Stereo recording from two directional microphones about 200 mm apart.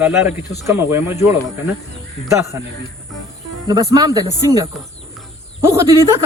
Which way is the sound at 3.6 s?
20° right (ahead or behind).